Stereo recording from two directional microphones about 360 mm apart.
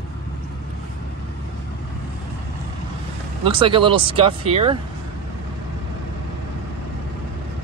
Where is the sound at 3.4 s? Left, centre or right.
Centre.